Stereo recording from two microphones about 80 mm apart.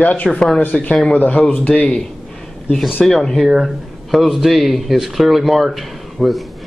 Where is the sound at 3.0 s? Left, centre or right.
Centre.